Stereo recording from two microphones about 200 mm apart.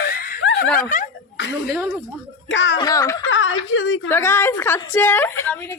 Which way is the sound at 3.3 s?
70° left (ahead or behind).